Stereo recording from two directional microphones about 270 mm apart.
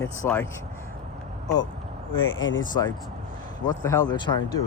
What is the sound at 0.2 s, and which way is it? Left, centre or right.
Speech, centre.